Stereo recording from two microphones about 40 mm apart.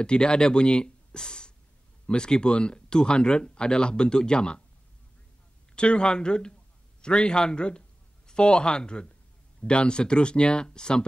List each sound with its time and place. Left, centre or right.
0.0 s speech: left
5.8 s a man's voice: left